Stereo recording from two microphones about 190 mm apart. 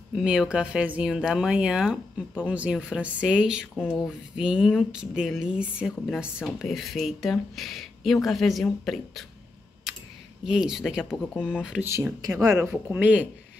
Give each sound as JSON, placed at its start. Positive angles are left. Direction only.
{"t": 0.1, "sound": "speech", "side_deg": -5}
{"t": 9.9, "sound": "a sound", "side_deg": 0}
{"t": 10.4, "sound": "speech", "side_deg": -5}
{"t": 11.9, "sound": "speech", "side_deg": -15}